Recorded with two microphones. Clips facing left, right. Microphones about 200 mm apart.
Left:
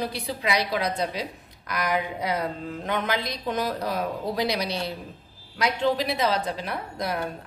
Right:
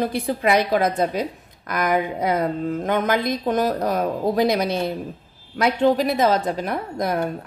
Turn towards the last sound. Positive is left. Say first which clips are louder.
# right 6 dB
turn(degrees=-50)  # may be behind; listen again after turning